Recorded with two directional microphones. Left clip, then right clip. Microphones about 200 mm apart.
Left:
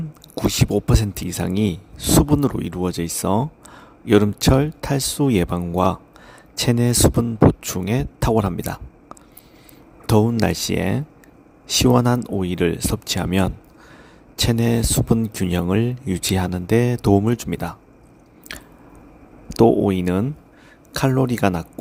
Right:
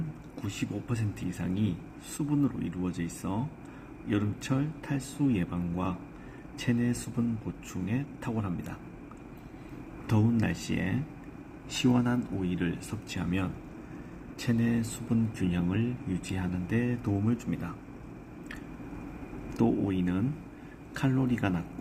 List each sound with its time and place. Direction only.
0.3 s speech: 55° left (ahead or behind)
10.1 s speech: 55° left (ahead or behind)
19.5 s speech: 55° left (ahead or behind)